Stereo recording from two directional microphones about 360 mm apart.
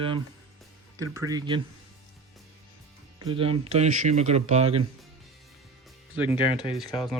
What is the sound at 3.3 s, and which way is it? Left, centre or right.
Speech, centre.